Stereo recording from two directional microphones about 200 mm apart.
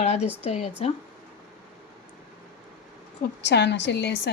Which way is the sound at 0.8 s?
30° left (ahead or behind).